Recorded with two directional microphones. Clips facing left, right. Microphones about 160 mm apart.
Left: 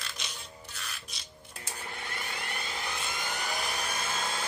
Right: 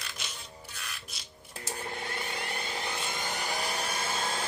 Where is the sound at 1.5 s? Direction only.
35° right (ahead or behind).